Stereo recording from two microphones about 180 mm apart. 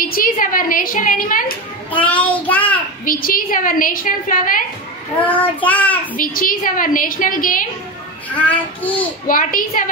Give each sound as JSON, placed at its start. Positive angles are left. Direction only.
{"t": 0.0, "sound": "a woman's voice", "side_deg": 50}
{"t": 1.9, "sound": "child singing", "side_deg": 10}
{"t": 3.1, "sound": "a woman's voice", "side_deg": 50}
{"t": 5.2, "sound": "child singing", "side_deg": 10}
{"t": 6.1, "sound": "a woman's voice", "side_deg": 50}
{"t": 8.3, "sound": "child singing", "side_deg": 10}
{"t": 9.3, "sound": "a woman's voice", "side_deg": 50}